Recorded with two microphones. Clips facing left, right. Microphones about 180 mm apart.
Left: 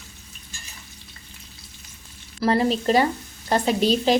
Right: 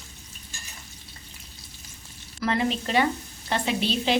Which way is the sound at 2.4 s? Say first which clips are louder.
Left 5 dB; 35° left (ahead or behind).